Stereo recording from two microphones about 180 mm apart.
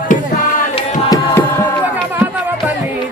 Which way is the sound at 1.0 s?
20° left (ahead or behind).